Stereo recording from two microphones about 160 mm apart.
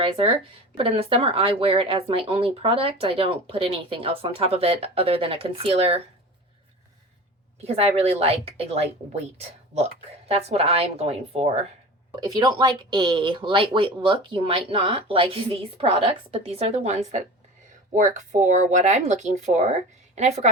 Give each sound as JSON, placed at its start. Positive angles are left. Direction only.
{"t": 0.0, "sound": "speech", "side_deg": -35}
{"t": 7.6, "sound": "speech", "side_deg": -40}
{"t": 10.2, "sound": "speech", "side_deg": -40}
{"t": 12.1, "sound": "speech", "side_deg": -25}